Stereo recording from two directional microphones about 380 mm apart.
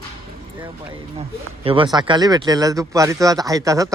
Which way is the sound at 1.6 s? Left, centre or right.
Centre.